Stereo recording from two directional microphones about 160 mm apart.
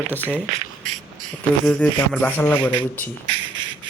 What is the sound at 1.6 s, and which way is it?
Speech, 5° left (ahead or behind).